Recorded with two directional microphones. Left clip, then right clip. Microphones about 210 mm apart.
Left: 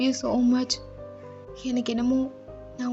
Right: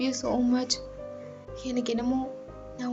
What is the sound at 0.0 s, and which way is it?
Speech, 55° left (ahead or behind).